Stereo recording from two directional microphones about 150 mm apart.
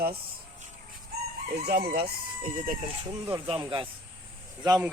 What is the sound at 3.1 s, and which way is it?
Speech, 30° right (ahead or behind).